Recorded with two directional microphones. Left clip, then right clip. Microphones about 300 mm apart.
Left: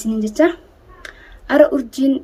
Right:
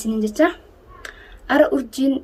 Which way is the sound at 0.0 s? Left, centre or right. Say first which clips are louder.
Left 2 dB; centre.